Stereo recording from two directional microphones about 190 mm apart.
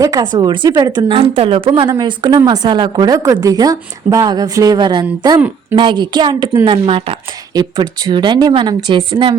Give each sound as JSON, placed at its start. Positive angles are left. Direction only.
{"t": 0.0, "sound": "a woman's voice", "side_deg": -20}